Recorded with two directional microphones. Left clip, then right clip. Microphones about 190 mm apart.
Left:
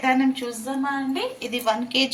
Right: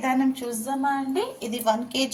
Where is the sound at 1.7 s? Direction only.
30° right (ahead or behind).